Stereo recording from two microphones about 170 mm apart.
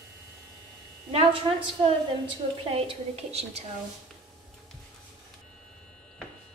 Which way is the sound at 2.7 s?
35° right (ahead or behind).